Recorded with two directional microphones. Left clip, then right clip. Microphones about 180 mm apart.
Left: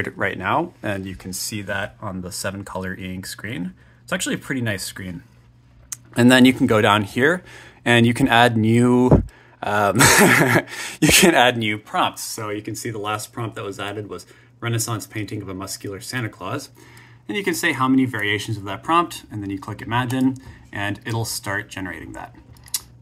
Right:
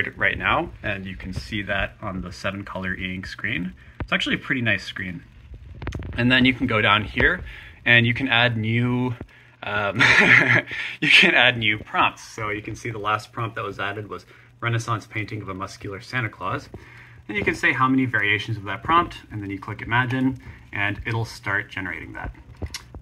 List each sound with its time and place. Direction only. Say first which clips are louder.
0.0 s speech: right 2 dB; 35° left (ahead or behind)
0.8 s speech: left 2 dB; 45° left (ahead or behind); by 5.1 s 30° left (ahead or behind)
5.9 s speech: left 5 dB; 55° left (ahead or behind); by 22.8 s 20° left (ahead or behind)